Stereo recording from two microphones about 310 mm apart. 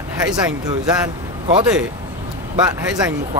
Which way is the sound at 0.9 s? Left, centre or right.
Centre.